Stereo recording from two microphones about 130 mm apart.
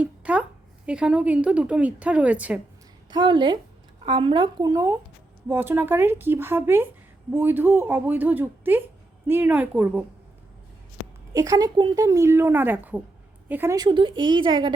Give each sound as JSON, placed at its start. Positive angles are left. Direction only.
{"t": 0.0, "sound": "a sound", "side_deg": -10}
{"t": 0.9, "sound": "speech", "side_deg": -10}
{"t": 3.1, "sound": "speech", "side_deg": -35}
{"t": 11.3, "sound": "speech", "side_deg": -25}
{"t": 13.7, "sound": "speech", "side_deg": -35}